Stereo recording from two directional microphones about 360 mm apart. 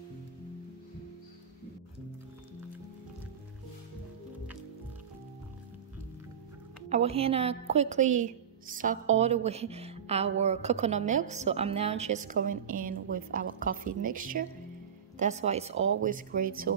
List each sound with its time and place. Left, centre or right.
6.9 s a woman's voice: centre